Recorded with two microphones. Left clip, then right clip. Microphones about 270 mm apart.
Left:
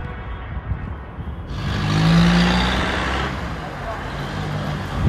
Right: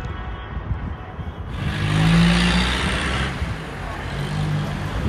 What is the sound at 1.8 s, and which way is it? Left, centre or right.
Vehicle, left.